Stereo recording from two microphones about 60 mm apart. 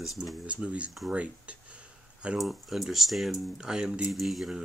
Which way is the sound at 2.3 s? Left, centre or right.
Centre.